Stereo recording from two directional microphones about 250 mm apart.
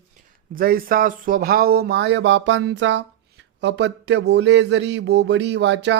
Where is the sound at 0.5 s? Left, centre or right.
Right.